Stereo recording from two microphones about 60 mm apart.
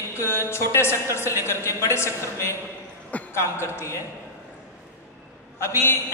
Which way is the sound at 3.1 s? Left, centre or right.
Left.